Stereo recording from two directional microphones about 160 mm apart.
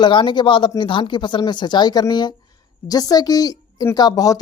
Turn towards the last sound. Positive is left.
turn(degrees=25)  # may be behind; listen again after turning